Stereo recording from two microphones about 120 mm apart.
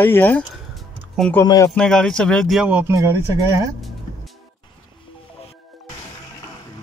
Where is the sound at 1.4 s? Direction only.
30° left (ahead or behind).